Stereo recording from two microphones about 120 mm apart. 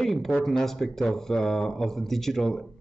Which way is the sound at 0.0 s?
Centre (ahead or behind).